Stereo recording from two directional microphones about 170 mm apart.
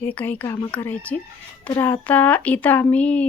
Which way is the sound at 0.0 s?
10° left (ahead or behind).